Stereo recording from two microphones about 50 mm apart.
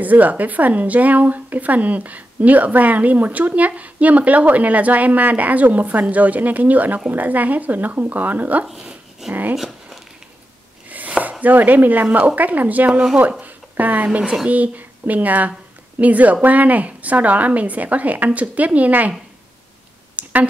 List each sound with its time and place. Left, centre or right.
0.0 s speech: right
8.6 s dog: centre
9.3 s speech: right
9.6 s a sound: centre
10.9 s chopping: right
11.4 s speech: right
13.4 s a sound: right
14.0 s speech: right
20.2 s a sound: right